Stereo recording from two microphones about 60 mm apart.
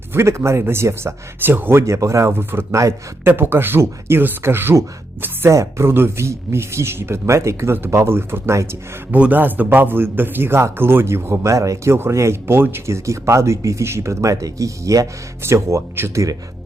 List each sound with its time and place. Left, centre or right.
0.1 s a man's voice: right
1.8 s speech: right
2.3 s a man's voice: right
5.5 s speech: right
9.1 s a man's voice: right
12.1 s speech: right
13.8 s speech: right
15.4 s speech: right